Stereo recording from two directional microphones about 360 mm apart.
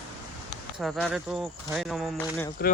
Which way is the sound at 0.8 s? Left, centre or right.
Centre.